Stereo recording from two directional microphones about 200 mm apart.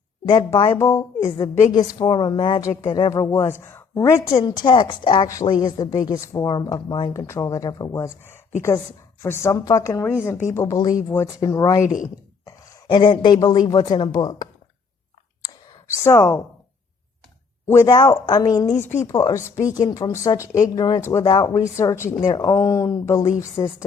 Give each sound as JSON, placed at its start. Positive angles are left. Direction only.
{"t": 0.3, "sound": "a woman's voice", "side_deg": 20}
{"t": 16.0, "sound": "speech", "side_deg": 10}
{"t": 17.7, "sound": "a woman's voice", "side_deg": 15}